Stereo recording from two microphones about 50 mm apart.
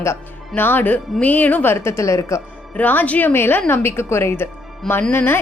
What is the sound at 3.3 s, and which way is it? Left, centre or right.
A woman's voice, left.